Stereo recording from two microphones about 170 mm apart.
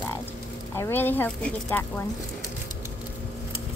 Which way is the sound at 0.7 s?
15° left (ahead or behind).